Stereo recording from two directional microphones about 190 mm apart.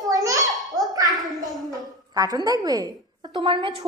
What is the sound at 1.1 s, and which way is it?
Speech, centre (ahead or behind).